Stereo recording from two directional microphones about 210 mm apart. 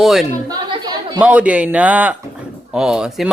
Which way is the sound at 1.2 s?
5° right (ahead or behind).